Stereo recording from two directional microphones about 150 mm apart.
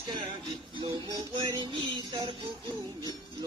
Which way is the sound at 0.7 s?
30° right (ahead or behind).